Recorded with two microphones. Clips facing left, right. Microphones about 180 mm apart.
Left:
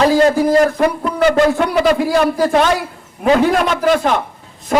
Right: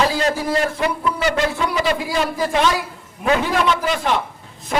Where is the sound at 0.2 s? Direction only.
50° left (ahead or behind).